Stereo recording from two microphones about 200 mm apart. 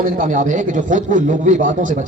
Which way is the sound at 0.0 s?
40° right (ahead or behind).